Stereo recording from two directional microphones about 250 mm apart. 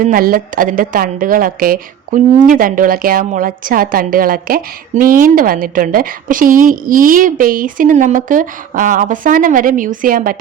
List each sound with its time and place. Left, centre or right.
0.0 s a woman's voice: right